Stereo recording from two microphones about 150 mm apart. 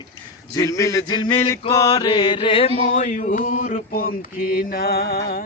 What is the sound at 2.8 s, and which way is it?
Mantra, 50° left (ahead or behind).